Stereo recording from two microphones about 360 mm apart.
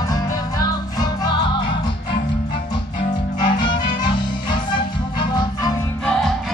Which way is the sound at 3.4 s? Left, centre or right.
Centre.